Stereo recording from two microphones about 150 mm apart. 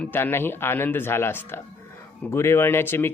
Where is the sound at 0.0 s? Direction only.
15° left (ahead or behind).